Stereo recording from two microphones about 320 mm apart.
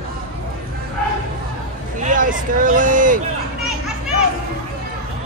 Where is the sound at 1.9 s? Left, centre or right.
Right.